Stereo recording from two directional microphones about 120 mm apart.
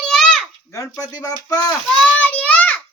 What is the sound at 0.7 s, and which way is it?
Speech, 30° left (ahead or behind).